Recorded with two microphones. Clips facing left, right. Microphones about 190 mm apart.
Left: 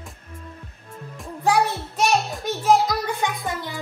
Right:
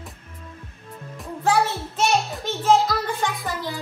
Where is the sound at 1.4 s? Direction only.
15° left (ahead or behind).